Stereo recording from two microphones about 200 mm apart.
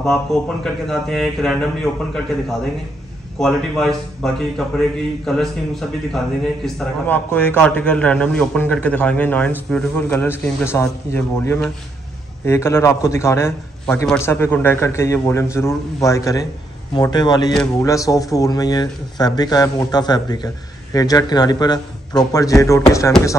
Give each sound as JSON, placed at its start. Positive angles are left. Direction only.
{"t": 0.0, "sound": "speech", "side_deg": 0}
{"t": 3.3, "sound": "a man's voice", "side_deg": 0}